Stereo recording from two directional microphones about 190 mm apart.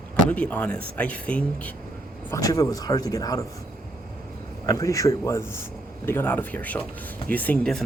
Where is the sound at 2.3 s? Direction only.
20° left (ahead or behind).